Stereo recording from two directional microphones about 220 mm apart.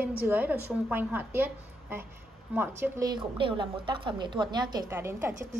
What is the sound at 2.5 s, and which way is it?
A woman's voice, 10° right (ahead or behind).